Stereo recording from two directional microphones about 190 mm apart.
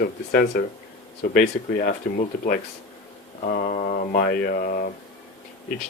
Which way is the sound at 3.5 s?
45° left (ahead or behind).